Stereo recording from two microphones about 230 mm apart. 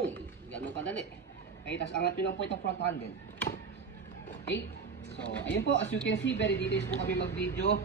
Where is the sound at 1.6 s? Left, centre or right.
Left.